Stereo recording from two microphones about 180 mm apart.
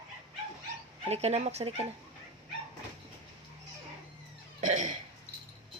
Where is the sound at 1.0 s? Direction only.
35° right (ahead or behind).